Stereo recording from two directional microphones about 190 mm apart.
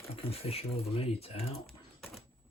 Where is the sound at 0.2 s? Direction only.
30° left (ahead or behind).